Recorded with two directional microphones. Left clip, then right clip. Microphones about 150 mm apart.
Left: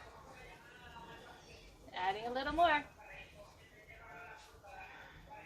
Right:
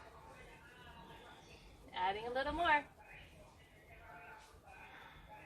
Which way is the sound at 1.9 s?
Centre (ahead or behind).